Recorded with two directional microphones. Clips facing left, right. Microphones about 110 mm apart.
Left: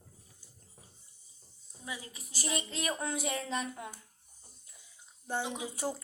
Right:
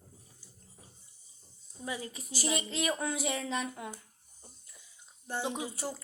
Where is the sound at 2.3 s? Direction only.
5° right (ahead or behind).